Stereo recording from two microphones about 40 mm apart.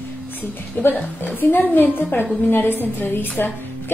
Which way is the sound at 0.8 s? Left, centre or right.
Left.